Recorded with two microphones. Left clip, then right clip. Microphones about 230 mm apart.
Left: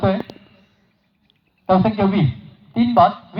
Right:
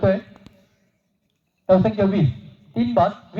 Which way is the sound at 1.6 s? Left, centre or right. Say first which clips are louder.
Even; right.